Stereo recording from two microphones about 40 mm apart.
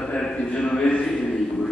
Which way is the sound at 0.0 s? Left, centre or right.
Left.